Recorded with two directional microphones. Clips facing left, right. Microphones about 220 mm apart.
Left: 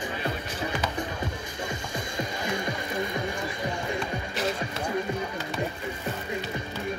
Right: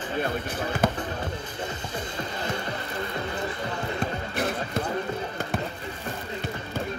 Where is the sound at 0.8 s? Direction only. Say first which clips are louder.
Right 7 dB; 50° right (ahead or behind).